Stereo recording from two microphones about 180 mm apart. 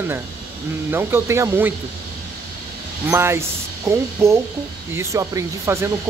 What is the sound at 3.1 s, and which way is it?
Speech, 15° right (ahead or behind).